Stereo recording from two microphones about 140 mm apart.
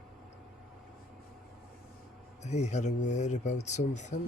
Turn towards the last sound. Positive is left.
turn(degrees=55)  # may be behind; listen again after turning